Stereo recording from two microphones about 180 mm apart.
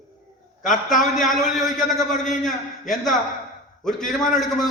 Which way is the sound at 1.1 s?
Centre (ahead or behind).